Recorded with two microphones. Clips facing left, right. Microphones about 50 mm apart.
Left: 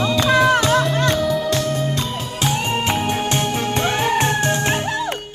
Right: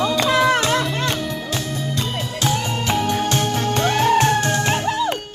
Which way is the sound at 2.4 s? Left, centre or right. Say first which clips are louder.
Left 2 dB; left.